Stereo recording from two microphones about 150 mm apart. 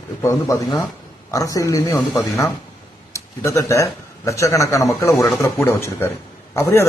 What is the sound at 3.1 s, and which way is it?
Speech, 20° left (ahead or behind).